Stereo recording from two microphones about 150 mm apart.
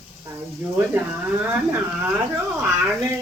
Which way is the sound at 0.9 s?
15° right (ahead or behind).